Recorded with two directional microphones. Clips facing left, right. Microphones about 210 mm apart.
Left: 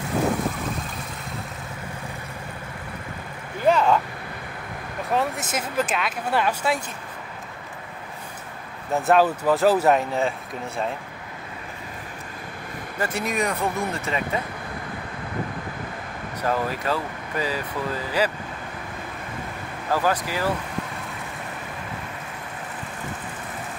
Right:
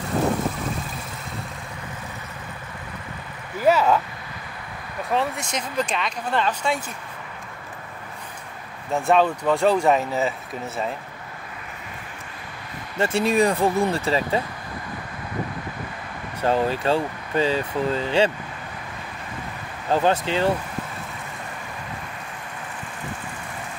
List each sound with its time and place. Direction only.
3.6 s speech: 5° right (ahead or behind)
5.1 s speech: centre (ahead or behind)
8.9 s speech: 5° left (ahead or behind)
12.9 s speech: 25° right (ahead or behind)
16.3 s speech: 30° right (ahead or behind)
19.9 s speech: 25° right (ahead or behind)